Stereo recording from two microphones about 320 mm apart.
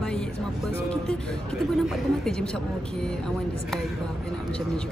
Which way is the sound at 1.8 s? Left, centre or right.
Centre.